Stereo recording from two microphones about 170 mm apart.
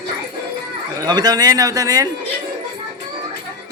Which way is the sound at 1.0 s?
25° right (ahead or behind).